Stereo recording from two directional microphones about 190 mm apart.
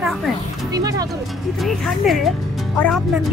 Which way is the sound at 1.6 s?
Centre (ahead or behind).